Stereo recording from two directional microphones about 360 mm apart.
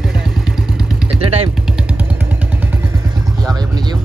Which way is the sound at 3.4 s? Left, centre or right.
Centre.